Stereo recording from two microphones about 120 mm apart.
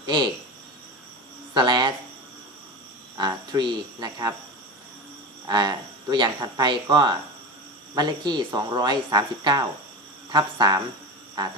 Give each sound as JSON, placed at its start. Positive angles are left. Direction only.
{"t": 0.0, "sound": "speech", "side_deg": -40}
{"t": 1.5, "sound": "speech", "side_deg": -40}
{"t": 3.2, "sound": "speech", "side_deg": -35}
{"t": 5.5, "sound": "speech", "side_deg": -35}